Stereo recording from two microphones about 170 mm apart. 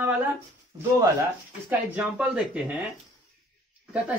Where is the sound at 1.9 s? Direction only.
5° right (ahead or behind).